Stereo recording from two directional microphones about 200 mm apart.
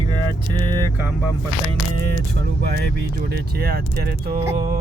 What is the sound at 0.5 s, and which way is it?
Speech, 20° right (ahead or behind).